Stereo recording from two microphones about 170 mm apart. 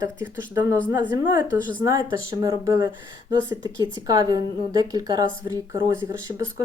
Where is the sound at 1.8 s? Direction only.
20° right (ahead or behind).